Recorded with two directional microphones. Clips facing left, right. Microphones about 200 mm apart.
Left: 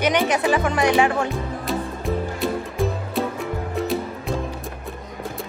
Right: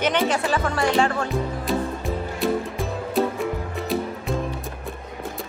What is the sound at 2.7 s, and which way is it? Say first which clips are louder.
Music: even; centre (ahead or behind).